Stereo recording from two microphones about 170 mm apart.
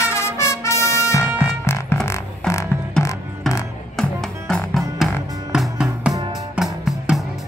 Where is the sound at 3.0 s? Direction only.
5° left (ahead or behind).